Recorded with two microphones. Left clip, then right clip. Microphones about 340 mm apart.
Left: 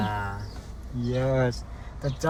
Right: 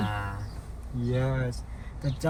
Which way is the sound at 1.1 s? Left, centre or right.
Centre.